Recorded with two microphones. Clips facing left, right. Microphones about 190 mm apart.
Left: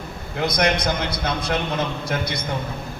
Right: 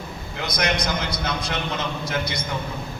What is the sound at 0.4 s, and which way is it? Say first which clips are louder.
A man's voice: left 4 dB; 55° left (ahead or behind).